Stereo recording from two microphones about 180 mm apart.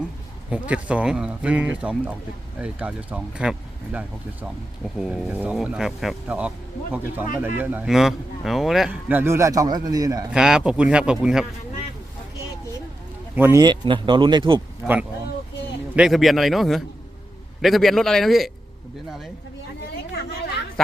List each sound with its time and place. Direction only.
0.7 s speech: 5° right (ahead or behind)
10.3 s speech: 5° right (ahead or behind)
13.3 s speech: 15° right (ahead or behind)
16.0 s speech: centre (ahead or behind)
20.8 s speech: centre (ahead or behind)